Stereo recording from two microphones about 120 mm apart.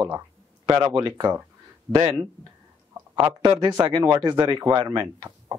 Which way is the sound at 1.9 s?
25° right (ahead or behind).